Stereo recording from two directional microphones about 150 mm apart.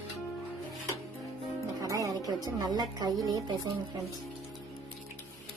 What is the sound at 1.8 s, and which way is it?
A woman's voice, 20° right (ahead or behind).